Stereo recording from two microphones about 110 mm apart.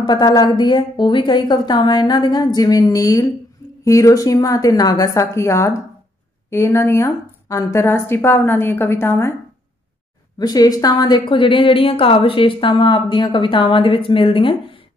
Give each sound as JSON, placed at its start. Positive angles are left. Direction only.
{"t": 0.0, "sound": "a woman's voice", "side_deg": 40}
{"t": 10.4, "sound": "a woman's voice", "side_deg": 35}